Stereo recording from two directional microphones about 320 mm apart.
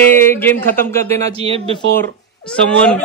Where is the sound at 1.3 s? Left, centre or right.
Centre.